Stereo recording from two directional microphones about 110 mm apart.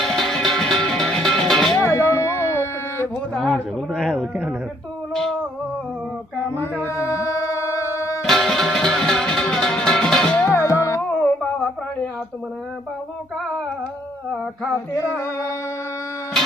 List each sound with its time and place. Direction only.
0.0 s music: 5° left (ahead or behind)
1.8 s music: 25° left (ahead or behind)
3.3 s a man's voice: centre (ahead or behind)
6.6 s music: 20° left (ahead or behind)
8.2 s music: 5° left (ahead or behind)
10.5 s music: 25° left (ahead or behind)
11.1 s music: 15° left (ahead or behind)
14.9 s music: 25° left (ahead or behind)